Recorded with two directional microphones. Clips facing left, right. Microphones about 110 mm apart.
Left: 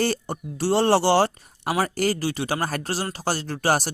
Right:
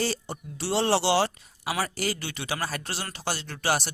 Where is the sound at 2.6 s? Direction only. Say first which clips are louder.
Left 6 dB; 45° left (ahead or behind).